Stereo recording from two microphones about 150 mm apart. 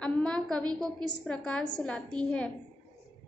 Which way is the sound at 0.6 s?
25° right (ahead or behind).